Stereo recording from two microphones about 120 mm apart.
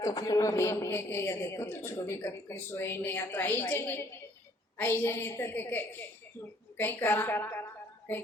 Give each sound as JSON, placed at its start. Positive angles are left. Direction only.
{"t": 0.0, "sound": "a woman's voice", "side_deg": 30}